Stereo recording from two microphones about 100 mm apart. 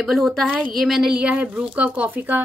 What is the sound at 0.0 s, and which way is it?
A woman's voice, centre (ahead or behind).